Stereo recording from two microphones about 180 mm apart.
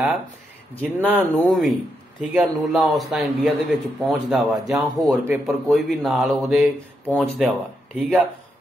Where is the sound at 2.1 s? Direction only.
Centre (ahead or behind).